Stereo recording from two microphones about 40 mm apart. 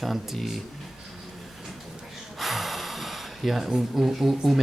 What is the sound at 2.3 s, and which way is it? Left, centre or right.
Gasp, centre.